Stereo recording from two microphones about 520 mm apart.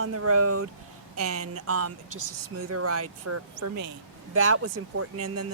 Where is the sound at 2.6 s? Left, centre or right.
Right.